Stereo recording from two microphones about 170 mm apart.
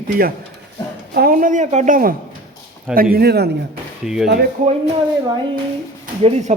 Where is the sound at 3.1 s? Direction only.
70° right (ahead or behind).